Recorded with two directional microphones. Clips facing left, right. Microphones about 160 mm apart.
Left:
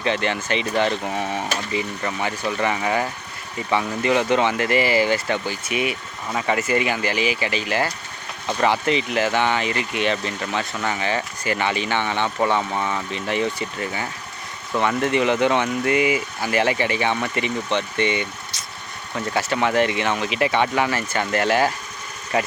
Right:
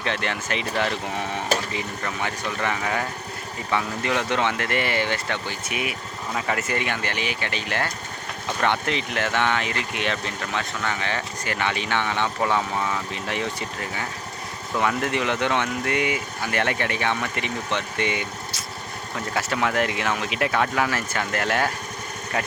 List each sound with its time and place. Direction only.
0.0 s speech: centre (ahead or behind)